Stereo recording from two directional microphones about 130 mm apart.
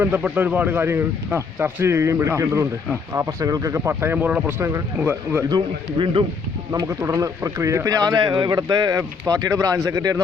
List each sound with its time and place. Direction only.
0.0 s speech: 10° right (ahead or behind)
5.5 s speech: 35° right (ahead or behind)
6.7 s speech: 25° right (ahead or behind)